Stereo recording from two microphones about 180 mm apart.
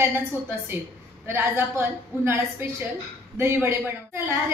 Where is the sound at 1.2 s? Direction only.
15° right (ahead or behind).